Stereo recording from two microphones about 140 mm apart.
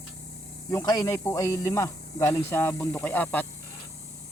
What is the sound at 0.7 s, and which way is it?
Speech, 25° left (ahead or behind).